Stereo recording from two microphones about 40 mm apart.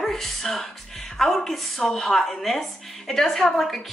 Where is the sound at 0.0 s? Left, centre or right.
Centre.